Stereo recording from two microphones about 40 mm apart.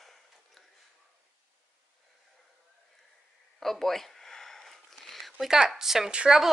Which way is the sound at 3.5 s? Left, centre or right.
Centre.